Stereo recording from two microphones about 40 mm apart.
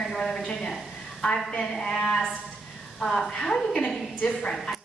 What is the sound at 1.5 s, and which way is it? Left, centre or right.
A woman's voice, left.